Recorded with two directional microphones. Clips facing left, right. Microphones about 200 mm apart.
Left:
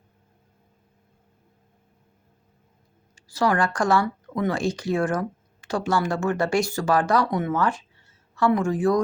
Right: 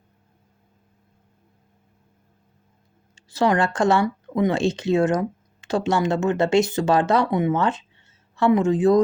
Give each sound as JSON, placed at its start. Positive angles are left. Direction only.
{"t": 3.2, "sound": "speech", "side_deg": -25}